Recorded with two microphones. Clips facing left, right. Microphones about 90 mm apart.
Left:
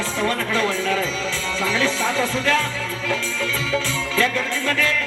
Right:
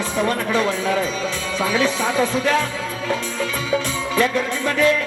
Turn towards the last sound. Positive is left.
turn(degrees=-20)  # may be behind; listen again after turning